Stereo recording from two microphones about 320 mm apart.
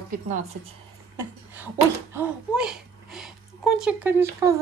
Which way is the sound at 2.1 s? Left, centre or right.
Centre.